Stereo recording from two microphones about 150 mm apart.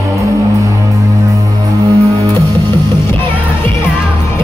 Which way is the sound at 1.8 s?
20° right (ahead or behind).